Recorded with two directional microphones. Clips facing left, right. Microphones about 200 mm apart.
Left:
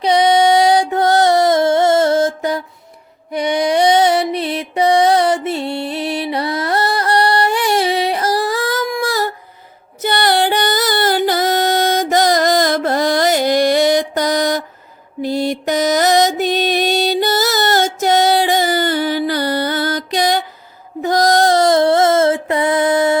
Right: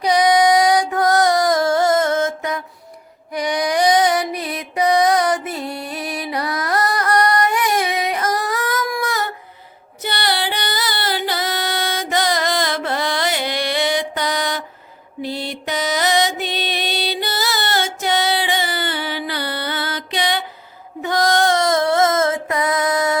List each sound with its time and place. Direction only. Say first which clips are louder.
0.0 s music: left 2 dB; 25° left (ahead or behind)
10.0 s music: left 7 dB; 45° left (ahead or behind)
15.2 s mantra: left 8 dB; 45° left (ahead or behind)
21.0 s child singing: left 4 dB; 40° left (ahead or behind)